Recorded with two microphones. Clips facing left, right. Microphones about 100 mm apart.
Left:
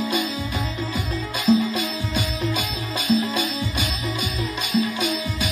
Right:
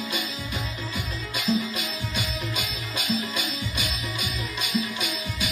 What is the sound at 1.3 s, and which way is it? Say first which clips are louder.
Music: left 7 dB; 35° left (ahead or behind).